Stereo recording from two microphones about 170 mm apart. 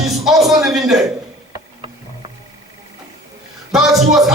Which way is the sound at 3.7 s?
Centre (ahead or behind).